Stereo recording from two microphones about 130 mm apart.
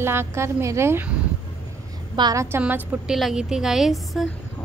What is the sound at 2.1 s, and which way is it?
Speech, 30° right (ahead or behind).